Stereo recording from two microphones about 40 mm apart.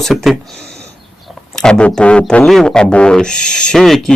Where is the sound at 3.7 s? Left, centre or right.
Centre.